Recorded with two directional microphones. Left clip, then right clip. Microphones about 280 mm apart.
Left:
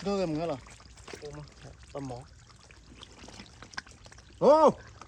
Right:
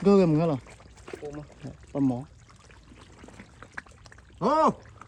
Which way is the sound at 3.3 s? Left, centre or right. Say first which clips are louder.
Even; centre.